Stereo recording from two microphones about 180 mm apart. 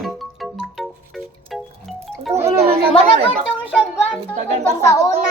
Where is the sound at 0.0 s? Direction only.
Centre (ahead or behind).